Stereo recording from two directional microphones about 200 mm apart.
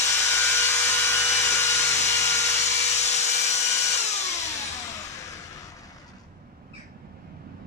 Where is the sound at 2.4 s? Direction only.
35° left (ahead or behind).